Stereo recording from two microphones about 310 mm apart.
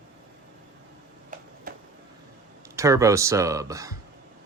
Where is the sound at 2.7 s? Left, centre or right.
Centre.